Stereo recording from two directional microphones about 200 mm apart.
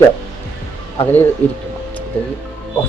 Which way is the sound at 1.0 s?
10° left (ahead or behind).